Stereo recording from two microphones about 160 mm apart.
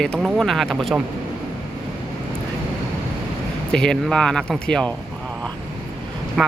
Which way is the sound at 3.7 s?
5° left (ahead or behind).